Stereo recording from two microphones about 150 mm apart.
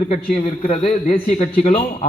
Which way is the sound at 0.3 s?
40° left (ahead or behind).